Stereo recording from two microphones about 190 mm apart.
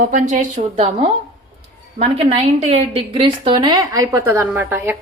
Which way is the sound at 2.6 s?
30° right (ahead or behind).